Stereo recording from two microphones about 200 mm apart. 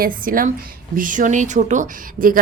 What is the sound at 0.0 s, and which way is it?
A woman's voice, 45° right (ahead or behind).